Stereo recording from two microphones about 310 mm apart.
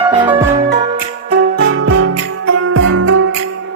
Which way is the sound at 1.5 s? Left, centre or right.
Right.